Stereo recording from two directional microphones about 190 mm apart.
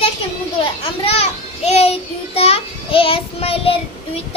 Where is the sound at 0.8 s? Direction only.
30° left (ahead or behind).